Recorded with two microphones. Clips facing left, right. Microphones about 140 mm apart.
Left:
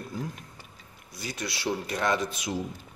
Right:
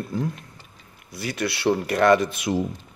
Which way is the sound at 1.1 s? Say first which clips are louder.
Right 8 dB; 65° right (ahead or behind).